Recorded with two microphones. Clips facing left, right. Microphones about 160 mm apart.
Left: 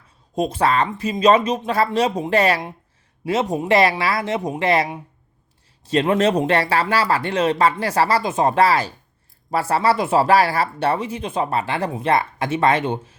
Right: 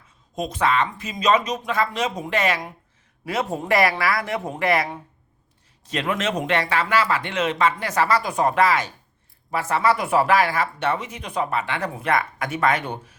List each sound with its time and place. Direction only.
0.3 s speech: 30° left (ahead or behind)